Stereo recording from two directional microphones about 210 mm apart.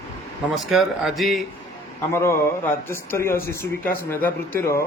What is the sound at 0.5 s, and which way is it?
Speech, centre (ahead or behind).